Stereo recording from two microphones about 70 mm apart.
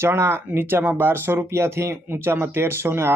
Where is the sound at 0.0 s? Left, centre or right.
Right.